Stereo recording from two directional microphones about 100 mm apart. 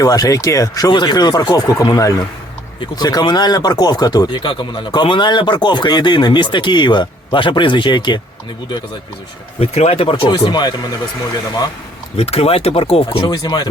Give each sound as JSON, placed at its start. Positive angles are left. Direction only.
{"t": 0.0, "sound": "speech", "side_deg": 40}
{"t": 9.6, "sound": "speech", "side_deg": 85}
{"t": 10.5, "sound": "speech", "side_deg": 45}
{"t": 12.1, "sound": "speech", "side_deg": 85}
{"t": 13.2, "sound": "speech", "side_deg": 45}